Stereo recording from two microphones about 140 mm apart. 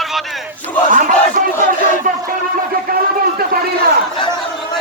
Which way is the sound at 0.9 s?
70° right (ahead or behind).